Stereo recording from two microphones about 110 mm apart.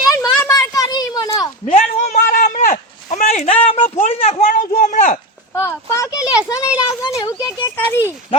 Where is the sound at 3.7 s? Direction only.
65° left (ahead or behind).